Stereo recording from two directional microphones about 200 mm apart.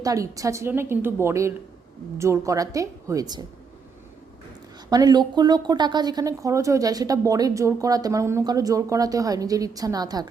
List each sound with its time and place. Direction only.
0.0 s speech: 15° right (ahead or behind)
4.9 s speech: 20° right (ahead or behind)